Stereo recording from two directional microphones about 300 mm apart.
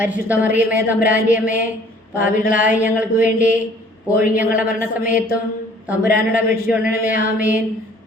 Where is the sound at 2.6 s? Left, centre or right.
Centre.